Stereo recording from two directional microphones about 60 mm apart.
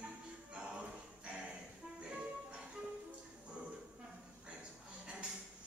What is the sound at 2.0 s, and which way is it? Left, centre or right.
Music, centre.